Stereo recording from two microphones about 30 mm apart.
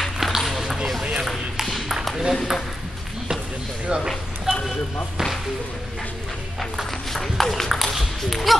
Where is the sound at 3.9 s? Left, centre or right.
Right.